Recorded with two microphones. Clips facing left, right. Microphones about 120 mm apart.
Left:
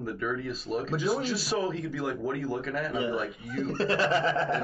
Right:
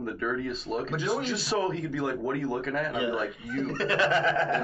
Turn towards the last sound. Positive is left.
turn(degrees=35)  # may be behind; listen again after turning